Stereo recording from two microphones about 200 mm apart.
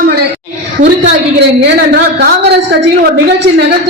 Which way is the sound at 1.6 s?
55° right (ahead or behind).